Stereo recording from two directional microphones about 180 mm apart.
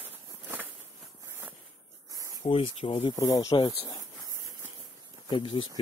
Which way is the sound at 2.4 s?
30° left (ahead or behind).